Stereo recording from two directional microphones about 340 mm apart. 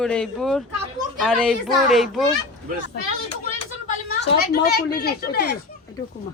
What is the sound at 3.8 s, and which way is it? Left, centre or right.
A woman's voice, left.